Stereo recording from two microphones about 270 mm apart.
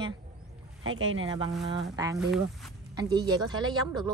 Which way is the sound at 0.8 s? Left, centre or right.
Right.